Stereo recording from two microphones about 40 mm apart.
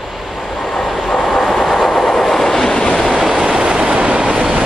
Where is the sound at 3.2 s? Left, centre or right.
Centre.